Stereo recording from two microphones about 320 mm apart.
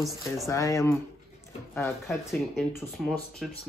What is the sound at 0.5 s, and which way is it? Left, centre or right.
Speech, centre.